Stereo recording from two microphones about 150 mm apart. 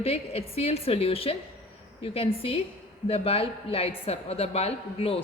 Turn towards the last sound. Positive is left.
turn(degrees=40)  # may be behind; listen again after turning